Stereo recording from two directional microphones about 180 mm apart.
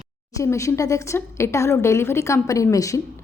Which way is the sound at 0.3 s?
15° left (ahead or behind).